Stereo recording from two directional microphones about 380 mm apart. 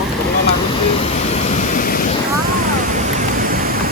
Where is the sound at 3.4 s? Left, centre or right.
Right.